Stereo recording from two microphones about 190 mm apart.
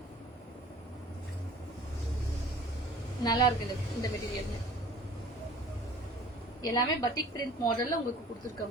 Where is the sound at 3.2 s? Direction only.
20° left (ahead or behind).